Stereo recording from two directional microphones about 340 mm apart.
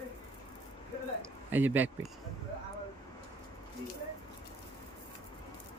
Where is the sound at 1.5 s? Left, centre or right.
Centre.